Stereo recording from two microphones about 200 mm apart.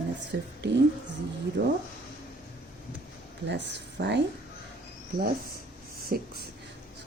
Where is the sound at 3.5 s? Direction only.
60° right (ahead or behind).